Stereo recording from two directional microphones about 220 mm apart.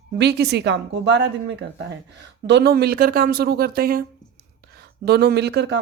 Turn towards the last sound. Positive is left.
turn(degrees=-50)  # may be behind; listen again after turning